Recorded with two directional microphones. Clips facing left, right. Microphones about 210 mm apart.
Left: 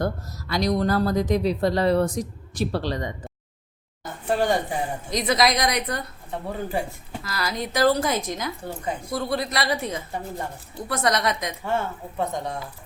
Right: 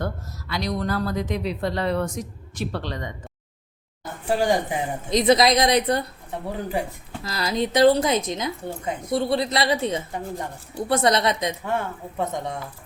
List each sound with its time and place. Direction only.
0.0 s speech: 40° left (ahead or behind)
4.3 s a woman's voice: 10° right (ahead or behind); by 6.1 s 30° right (ahead or behind)
7.3 s a woman's voice: 25° right (ahead or behind)